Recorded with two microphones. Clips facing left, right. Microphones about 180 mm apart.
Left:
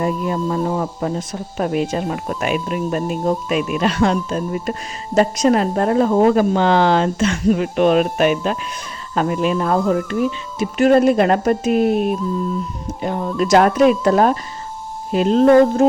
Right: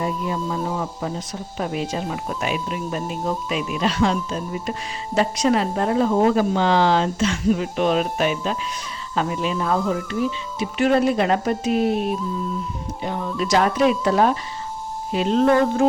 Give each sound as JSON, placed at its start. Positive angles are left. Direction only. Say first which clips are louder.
{"t": 0.0, "sound": "speech", "louder": "left 5 dB", "side_deg": 55}
{"t": 13.0, "sound": "speech", "louder": "left 5 dB", "side_deg": 45}